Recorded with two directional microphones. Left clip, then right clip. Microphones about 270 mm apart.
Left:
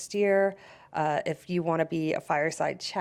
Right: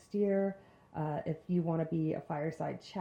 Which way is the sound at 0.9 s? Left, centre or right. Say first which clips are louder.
Left 10 dB; centre.